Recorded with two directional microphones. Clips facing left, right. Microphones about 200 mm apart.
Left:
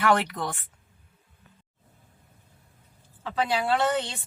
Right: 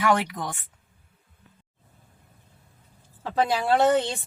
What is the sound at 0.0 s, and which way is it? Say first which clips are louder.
Speech: even; 15° right (ahead or behind).